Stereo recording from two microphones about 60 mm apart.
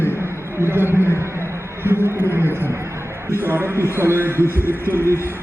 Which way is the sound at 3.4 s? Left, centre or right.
Right.